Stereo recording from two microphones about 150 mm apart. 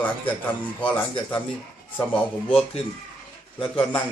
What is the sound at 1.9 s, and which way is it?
Speech, 10° left (ahead or behind).